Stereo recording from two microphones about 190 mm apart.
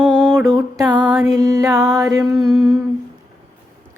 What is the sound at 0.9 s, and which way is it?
Music, 20° right (ahead or behind).